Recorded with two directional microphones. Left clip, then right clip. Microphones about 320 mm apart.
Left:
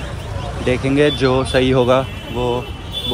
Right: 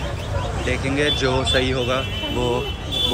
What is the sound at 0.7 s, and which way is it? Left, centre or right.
Speech, centre.